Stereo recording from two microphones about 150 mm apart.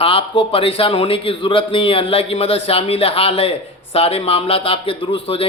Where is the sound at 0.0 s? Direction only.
35° left (ahead or behind).